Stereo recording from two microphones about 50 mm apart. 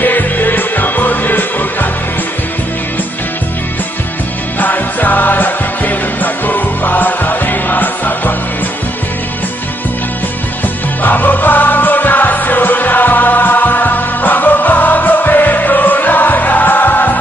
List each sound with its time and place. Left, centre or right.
0.0 s music: left
4.6 s music: left
11.0 s music: left